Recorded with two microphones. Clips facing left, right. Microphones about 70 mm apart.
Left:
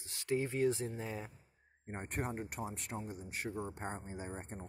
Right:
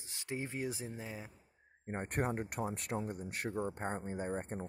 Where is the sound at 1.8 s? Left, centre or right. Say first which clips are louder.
Right 4 dB; right.